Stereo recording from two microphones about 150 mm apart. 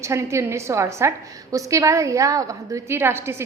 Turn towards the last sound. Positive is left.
turn(degrees=-15)  # may be behind; listen again after turning